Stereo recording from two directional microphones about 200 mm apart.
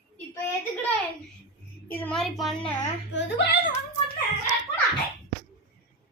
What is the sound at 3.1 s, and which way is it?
Speech, 60° left (ahead or behind).